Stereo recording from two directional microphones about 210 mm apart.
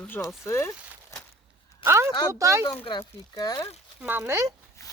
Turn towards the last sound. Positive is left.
turn(degrees=15)  # may be behind; listen again after turning